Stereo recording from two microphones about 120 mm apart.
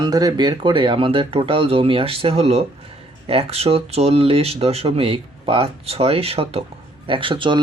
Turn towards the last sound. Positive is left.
turn(degrees=-45)  # may be behind; listen again after turning